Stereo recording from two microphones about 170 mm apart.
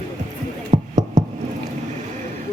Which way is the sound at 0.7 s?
45° right (ahead or behind).